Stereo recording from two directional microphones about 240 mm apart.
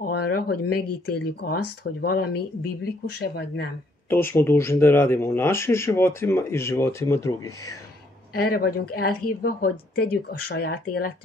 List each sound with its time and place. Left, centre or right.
0.0 s a sound: left
1.1 s speech: left
4.1 s speech: centre
8.4 s speech: left